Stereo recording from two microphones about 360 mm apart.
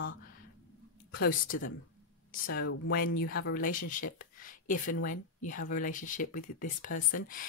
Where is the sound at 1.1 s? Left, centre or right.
Left.